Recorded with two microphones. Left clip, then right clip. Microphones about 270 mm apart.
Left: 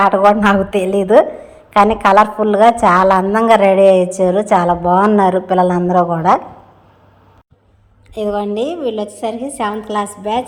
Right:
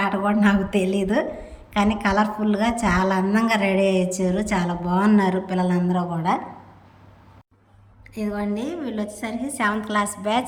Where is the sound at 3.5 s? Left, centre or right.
Left.